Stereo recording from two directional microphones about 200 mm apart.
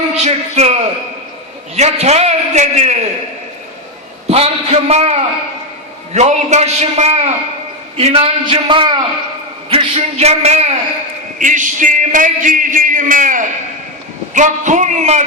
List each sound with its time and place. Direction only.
0.2 s a man's voice: 35° right (ahead or behind)
4.3 s a man's voice: 30° right (ahead or behind)
6.1 s a man's voice: 35° right (ahead or behind)